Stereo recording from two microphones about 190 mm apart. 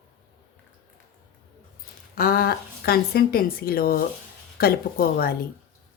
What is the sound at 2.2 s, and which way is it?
Speech, 55° left (ahead or behind).